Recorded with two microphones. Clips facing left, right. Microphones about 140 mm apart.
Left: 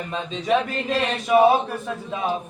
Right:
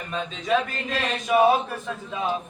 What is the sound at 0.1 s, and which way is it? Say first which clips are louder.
A man's voice: left 2 dB; 20° left (ahead or behind).